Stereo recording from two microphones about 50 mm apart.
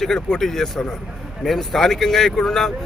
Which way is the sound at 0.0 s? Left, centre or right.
Centre.